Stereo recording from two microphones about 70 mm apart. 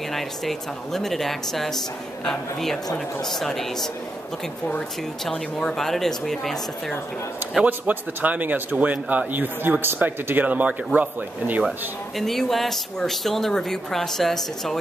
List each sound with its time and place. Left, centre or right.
0.1 s speech: centre
5.2 s speech: centre
7.6 s speech: right
12.2 s speech: centre